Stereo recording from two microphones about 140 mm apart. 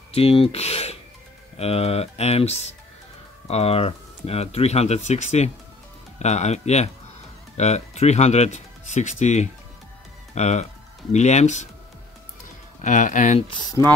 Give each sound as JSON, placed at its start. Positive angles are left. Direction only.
{"t": 0.1, "sound": "speech", "side_deg": 45}
{"t": 12.8, "sound": "speech", "side_deg": 65}
{"t": 13.5, "sound": "speech", "side_deg": 30}